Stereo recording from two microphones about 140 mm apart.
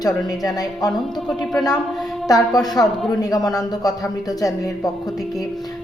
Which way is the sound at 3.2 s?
25° left (ahead or behind).